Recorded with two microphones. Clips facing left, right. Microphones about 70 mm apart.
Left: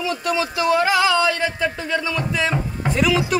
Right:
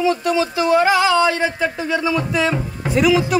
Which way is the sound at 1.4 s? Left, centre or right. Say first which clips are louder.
Right 3 dB; centre.